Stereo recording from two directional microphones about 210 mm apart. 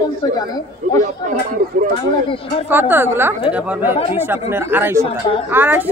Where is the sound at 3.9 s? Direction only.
25° left (ahead or behind).